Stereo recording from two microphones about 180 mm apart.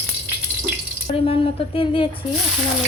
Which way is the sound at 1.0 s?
30° left (ahead or behind).